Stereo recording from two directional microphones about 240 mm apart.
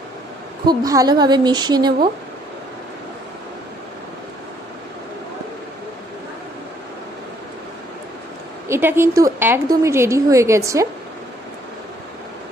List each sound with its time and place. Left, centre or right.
0.6 s a woman's voice: centre
8.6 s a woman's voice: centre